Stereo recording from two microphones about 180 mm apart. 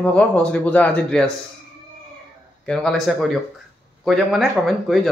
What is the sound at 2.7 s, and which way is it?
Speech, 5° left (ahead or behind).